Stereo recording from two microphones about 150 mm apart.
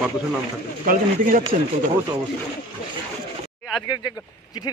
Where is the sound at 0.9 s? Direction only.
65° right (ahead or behind).